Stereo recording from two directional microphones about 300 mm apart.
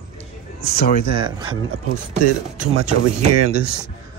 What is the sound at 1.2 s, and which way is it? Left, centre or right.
Speech, centre.